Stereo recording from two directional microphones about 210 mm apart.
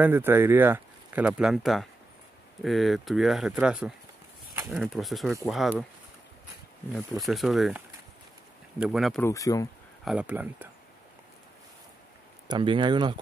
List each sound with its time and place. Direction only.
0.0 s speech: 10° right (ahead or behind)
6.9 s speech: centre (ahead or behind)
9.2 s speech: 15° left (ahead or behind)
10.0 s speech: 5° right (ahead or behind)
12.4 s speech: 25° right (ahead or behind)